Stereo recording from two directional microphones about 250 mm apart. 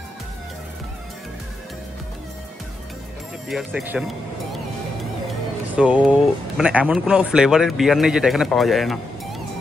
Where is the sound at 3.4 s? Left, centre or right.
Centre.